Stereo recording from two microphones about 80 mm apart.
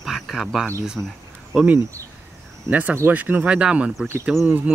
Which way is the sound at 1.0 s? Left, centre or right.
Right.